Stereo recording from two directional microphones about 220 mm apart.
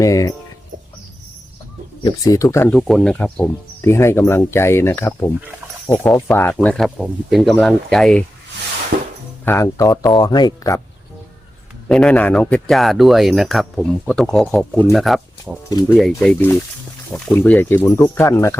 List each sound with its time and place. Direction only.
0.0 s speech: 15° left (ahead or behind)
2.0 s speech: 15° left (ahead or behind)
2.7 s speech: centre (ahead or behind)
8.9 s music: 50° right (ahead or behind)
9.4 s speech: 10° left (ahead or behind)
11.9 s speech: 5° left (ahead or behind)